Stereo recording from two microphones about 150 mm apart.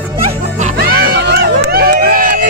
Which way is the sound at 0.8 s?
90° right.